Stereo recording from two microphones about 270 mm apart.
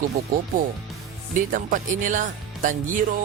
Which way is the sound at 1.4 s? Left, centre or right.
Right.